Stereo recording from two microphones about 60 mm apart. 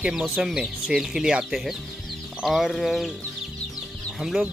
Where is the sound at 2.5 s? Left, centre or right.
Centre.